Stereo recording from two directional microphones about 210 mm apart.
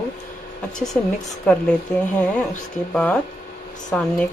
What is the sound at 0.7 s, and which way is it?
Speech, centre (ahead or behind).